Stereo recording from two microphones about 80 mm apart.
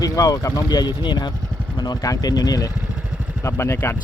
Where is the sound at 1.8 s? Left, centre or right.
Left.